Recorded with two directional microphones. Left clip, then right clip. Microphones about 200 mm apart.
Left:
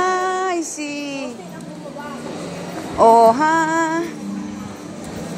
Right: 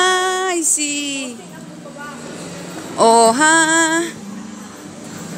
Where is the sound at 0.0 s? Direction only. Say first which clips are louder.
Right 3 dB; 45° right (ahead or behind).